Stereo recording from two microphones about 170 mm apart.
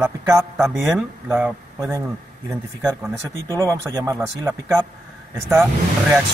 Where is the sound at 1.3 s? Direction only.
15° right (ahead or behind).